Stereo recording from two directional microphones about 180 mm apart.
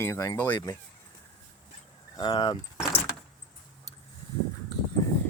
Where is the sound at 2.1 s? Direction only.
25° left (ahead or behind).